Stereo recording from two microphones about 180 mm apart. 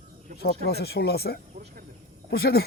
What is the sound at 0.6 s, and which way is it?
Speech, 65° left (ahead or behind).